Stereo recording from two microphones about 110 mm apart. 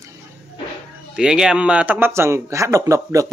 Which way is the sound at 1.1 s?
5° right (ahead or behind).